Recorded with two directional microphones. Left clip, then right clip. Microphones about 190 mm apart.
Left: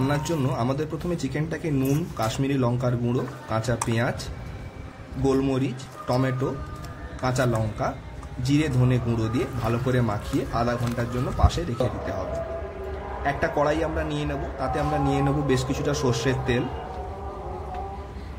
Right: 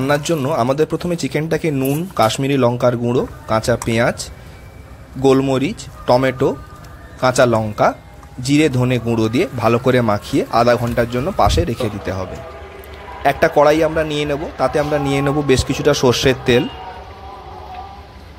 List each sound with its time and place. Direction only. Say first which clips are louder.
0.1 s a man's voice: right 10 dB; 35° right (ahead or behind)
13.2 s a man's voice: right 12 dB; 45° right (ahead or behind)